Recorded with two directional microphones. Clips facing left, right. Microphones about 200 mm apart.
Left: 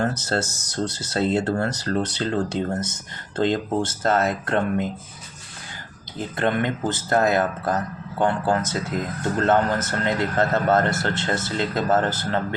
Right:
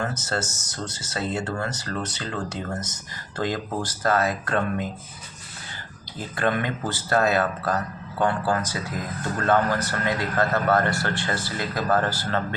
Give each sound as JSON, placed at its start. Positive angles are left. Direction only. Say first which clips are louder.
{"t": 0.0, "sound": "speech", "louder": "left 4 dB", "side_deg": 35}
{"t": 6.1, "sound": "a man's voice", "louder": "left 2 dB", "side_deg": 20}